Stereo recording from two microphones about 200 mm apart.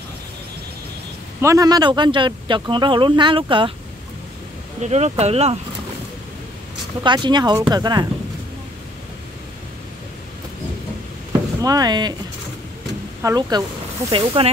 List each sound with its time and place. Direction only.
1.4 s speech: 15° right (ahead or behind)
4.8 s speech: 35° right (ahead or behind)
7.0 s speech: 25° right (ahead or behind)
11.6 s speech: 20° right (ahead or behind)
13.2 s speech: 20° right (ahead or behind)